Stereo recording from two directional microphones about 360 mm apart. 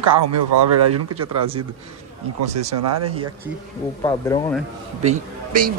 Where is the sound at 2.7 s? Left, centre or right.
Right.